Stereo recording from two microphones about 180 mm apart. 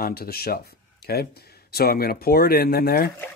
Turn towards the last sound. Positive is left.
turn(degrees=55)  # may be behind; listen again after turning